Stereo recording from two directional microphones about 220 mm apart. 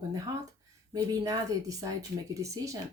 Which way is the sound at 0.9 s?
15° right (ahead or behind).